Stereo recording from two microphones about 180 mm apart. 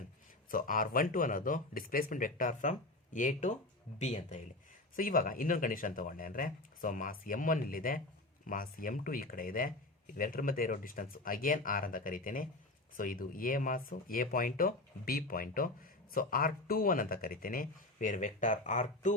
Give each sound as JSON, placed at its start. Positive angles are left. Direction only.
{"t": 0.5, "sound": "speech", "side_deg": 50}
{"t": 4.9, "sound": "speech", "side_deg": 50}